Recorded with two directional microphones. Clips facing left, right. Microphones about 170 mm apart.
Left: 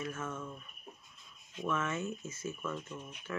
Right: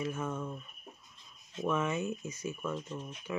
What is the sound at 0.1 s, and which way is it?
Speech, 15° right (ahead or behind).